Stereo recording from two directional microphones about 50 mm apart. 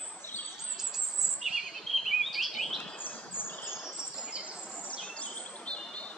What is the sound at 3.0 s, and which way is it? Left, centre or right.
Bird, left.